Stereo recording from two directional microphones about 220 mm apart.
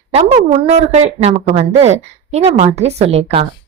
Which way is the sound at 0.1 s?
25° right (ahead or behind).